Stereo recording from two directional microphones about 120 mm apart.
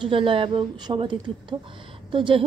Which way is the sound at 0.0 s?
45° right (ahead or behind).